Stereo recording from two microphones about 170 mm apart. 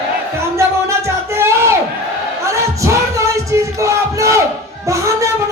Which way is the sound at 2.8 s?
20° right (ahead or behind).